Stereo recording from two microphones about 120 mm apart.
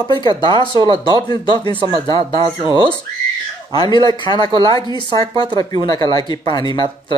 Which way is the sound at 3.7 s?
35° left (ahead or behind).